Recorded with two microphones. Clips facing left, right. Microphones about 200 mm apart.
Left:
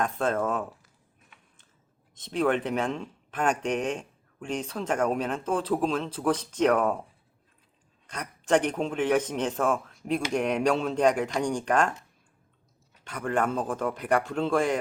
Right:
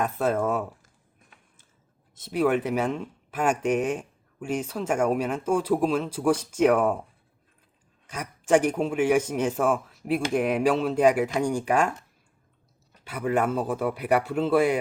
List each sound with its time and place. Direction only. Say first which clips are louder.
0.0 s speech: right 2 dB; 10° right (ahead or behind)
2.1 s speech: right 2 dB; 10° right (ahead or behind)
8.0 s speech: right 3 dB; 10° right (ahead or behind)
13.1 s speech: right 3 dB; 5° right (ahead or behind)